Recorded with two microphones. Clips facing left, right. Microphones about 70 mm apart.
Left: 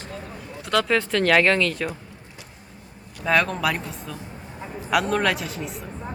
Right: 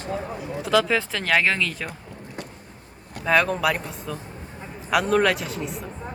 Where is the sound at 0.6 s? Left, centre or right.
Centre.